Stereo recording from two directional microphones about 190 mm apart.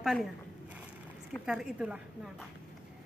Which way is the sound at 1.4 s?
5° right (ahead or behind).